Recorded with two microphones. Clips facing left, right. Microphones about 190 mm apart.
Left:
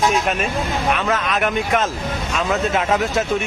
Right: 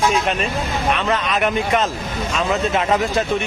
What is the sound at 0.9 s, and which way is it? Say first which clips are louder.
Speech: even; centre (ahead or behind).